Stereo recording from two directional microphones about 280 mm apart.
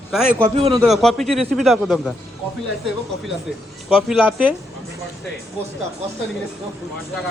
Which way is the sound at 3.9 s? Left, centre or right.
Centre.